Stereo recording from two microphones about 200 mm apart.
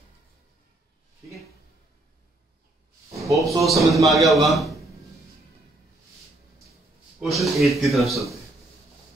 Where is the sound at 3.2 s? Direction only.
Centre (ahead or behind).